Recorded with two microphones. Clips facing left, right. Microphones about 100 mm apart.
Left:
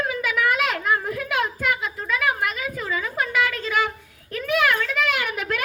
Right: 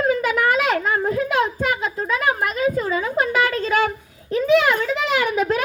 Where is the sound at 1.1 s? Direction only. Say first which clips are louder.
Right 5 dB; 25° right (ahead or behind).